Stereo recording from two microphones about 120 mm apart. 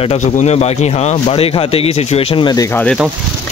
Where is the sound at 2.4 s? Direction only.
30° left (ahead or behind).